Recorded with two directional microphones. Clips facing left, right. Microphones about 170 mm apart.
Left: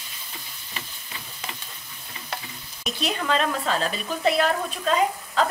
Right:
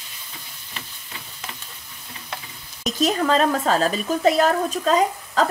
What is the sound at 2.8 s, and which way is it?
Speech, 40° right (ahead or behind).